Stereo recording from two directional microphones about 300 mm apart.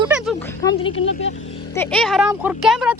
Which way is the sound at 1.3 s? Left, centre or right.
Left.